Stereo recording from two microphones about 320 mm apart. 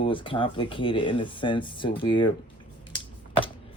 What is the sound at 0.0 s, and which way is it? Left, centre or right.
Speech, centre.